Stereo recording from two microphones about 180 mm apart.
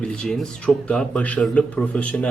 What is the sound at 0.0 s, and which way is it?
Speech, 5° left (ahead or behind).